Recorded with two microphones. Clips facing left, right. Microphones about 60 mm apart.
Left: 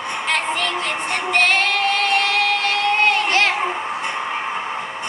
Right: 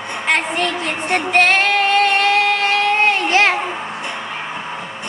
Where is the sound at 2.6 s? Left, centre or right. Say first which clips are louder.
Right 2 dB; right.